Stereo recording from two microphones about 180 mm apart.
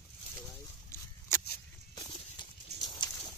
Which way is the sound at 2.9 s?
25° left (ahead or behind).